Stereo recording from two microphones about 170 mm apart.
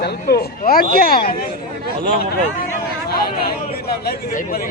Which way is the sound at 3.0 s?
65° left (ahead or behind).